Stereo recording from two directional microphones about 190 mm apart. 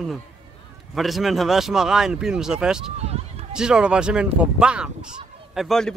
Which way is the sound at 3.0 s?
35° right (ahead or behind).